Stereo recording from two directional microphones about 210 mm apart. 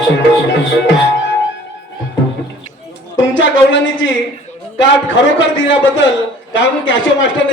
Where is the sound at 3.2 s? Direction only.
65° left (ahead or behind).